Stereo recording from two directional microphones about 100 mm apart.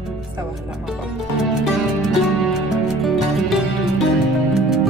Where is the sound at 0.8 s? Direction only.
5° right (ahead or behind).